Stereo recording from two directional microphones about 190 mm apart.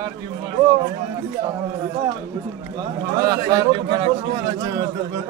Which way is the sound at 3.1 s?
20° right (ahead or behind).